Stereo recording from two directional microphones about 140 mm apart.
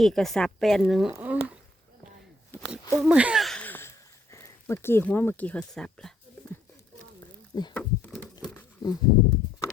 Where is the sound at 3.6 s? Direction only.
15° left (ahead or behind).